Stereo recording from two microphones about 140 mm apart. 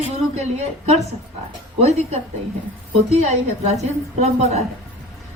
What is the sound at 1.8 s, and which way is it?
Speech, 50° right (ahead or behind).